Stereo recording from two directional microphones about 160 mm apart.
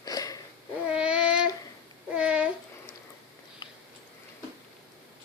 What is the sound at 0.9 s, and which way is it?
Child singing, 5° right (ahead or behind).